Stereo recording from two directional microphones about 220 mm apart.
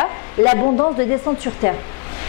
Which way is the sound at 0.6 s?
30° left (ahead or behind).